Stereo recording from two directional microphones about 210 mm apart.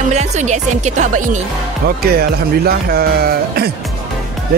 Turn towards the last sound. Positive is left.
turn(degrees=-45)  # may be behind; listen again after turning